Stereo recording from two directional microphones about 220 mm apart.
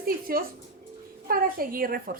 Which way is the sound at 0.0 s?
40° right (ahead or behind).